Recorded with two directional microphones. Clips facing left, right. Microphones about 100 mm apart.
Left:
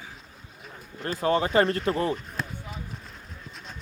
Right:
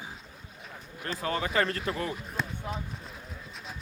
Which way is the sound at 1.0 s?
35° left (ahead or behind).